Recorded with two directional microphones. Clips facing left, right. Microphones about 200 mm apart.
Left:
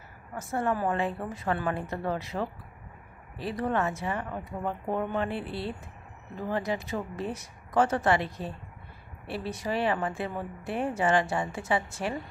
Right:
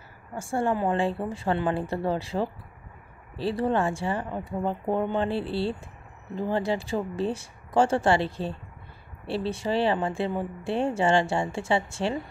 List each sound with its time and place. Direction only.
0.3 s speech: 30° right (ahead or behind)